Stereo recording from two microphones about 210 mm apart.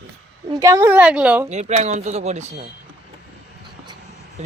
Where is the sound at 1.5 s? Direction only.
35° right (ahead or behind).